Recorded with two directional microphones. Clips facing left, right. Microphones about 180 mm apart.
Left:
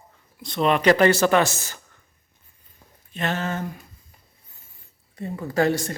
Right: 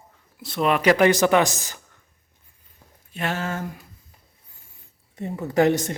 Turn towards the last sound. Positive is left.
turn(degrees=-20)  # may be behind; listen again after turning